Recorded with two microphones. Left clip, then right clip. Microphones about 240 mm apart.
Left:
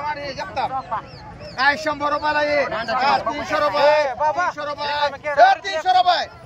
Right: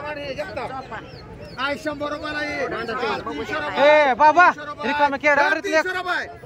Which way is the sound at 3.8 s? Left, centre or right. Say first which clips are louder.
Right 5 dB; right.